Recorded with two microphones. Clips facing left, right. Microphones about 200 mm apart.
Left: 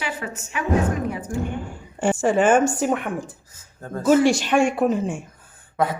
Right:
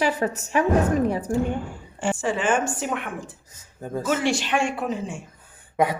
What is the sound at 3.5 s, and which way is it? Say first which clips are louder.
Speech: right 2 dB; 15° right (ahead or behind).